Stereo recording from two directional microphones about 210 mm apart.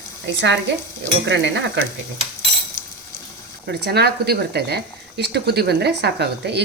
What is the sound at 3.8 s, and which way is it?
Speech, 50° right (ahead or behind).